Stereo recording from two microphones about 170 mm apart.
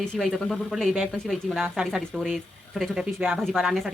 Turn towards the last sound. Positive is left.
turn(degrees=0)  # may be behind; listen again after turning